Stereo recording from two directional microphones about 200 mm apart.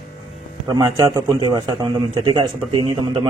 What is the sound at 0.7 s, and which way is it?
Speech, 20° right (ahead or behind).